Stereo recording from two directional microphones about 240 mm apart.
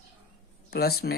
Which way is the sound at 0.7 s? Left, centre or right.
Left.